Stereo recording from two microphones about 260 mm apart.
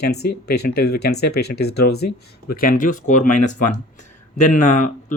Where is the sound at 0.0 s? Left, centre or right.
Left.